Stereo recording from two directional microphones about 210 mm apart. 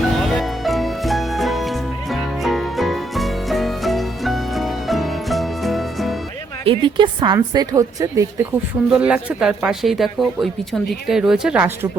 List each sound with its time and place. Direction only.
0.2 s music: centre (ahead or behind)
6.7 s a woman's voice: 25° right (ahead or behind)